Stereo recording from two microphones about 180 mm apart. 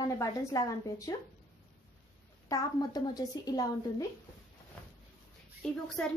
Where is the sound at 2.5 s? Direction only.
20° left (ahead or behind).